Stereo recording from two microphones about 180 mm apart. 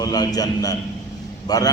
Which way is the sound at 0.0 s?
20° left (ahead or behind).